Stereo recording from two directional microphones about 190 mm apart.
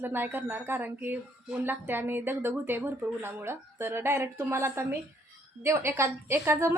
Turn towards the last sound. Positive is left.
turn(degrees=-10)  # may be behind; listen again after turning